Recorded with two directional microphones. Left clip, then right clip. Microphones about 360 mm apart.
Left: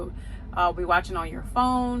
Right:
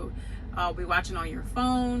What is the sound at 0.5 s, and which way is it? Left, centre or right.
Speech, centre.